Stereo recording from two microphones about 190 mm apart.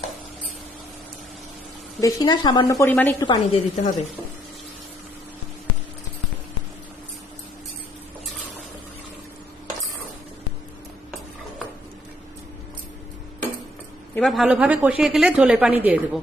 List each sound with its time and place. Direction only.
2.0 s a woman's voice: 20° left (ahead or behind)
3.2 s a woman's voice: 35° left (ahead or behind)
14.2 s speech: centre (ahead or behind)